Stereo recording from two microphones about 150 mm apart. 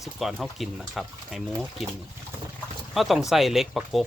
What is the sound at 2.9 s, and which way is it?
Speech, centre (ahead or behind).